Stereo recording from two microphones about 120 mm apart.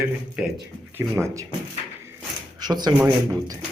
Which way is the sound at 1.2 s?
25° right (ahead or behind).